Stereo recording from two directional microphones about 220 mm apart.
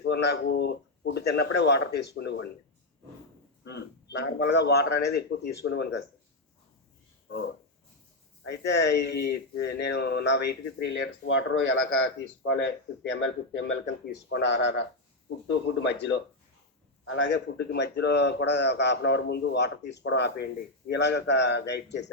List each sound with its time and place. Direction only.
0.0 s a man's voice: 50° left (ahead or behind)
3.6 s a man's voice: 50° left (ahead or behind)
7.3 s a man's voice: 55° left (ahead or behind)
17.1 s a man's voice: 55° left (ahead or behind)